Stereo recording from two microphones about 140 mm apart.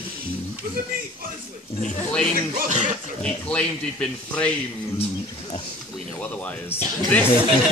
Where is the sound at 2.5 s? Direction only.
60° right (ahead or behind).